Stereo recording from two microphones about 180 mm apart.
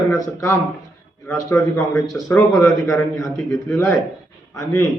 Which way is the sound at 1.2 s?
15° left (ahead or behind).